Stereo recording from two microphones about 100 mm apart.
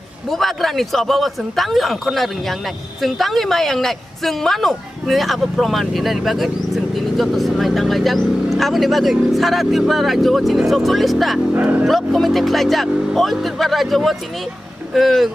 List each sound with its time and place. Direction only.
0.3 s a woman's voice: centre (ahead or behind)
11.5 s speech: 20° right (ahead or behind)
11.8 s a woman's voice: centre (ahead or behind)